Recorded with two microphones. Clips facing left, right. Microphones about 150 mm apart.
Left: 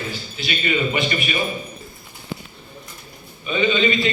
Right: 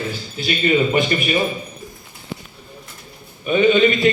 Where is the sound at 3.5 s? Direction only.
55° right (ahead or behind).